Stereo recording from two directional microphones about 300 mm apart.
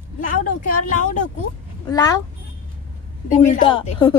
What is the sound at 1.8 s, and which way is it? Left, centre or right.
Speech, centre.